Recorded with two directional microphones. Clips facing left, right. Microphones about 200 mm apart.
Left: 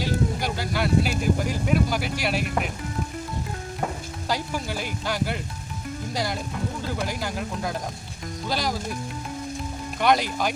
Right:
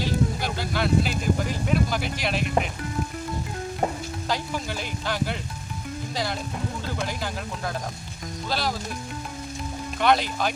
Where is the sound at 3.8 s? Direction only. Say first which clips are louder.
Right 3 dB; 30° right (ahead or behind).